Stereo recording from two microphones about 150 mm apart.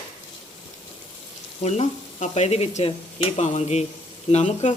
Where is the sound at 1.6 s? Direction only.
45° left (ahead or behind).